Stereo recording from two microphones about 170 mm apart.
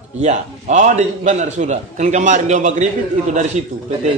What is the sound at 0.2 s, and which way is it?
A man's voice, 45° right (ahead or behind).